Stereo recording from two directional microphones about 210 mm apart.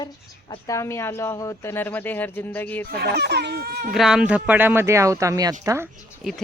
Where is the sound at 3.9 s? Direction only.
5° right (ahead or behind).